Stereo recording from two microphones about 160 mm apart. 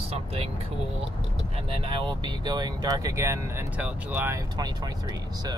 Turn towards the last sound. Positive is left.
turn(degrees=-25)  # may be behind; listen again after turning